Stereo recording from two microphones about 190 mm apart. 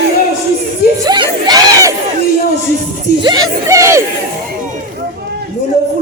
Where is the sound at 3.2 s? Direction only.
20° right (ahead or behind).